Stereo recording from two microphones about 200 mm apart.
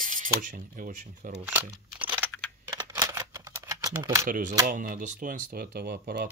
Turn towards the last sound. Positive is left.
turn(degrees=-40)  # may be behind; listen again after turning